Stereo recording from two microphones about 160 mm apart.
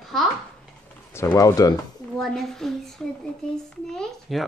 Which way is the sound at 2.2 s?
Centre (ahead or behind).